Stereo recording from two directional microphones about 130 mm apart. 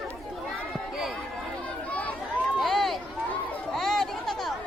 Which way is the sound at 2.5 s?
Centre (ahead or behind).